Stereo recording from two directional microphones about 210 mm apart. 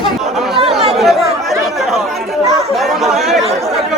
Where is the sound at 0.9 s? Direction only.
Centre (ahead or behind).